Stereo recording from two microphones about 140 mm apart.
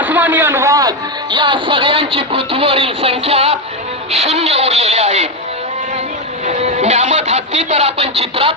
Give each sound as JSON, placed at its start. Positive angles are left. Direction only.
{"t": 0.0, "sound": "a woman's voice", "side_deg": -15}
{"t": 6.4, "sound": "music", "side_deg": -55}